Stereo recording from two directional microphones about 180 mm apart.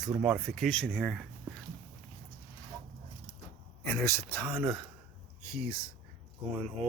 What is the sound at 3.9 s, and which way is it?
Speech, 15° left (ahead or behind).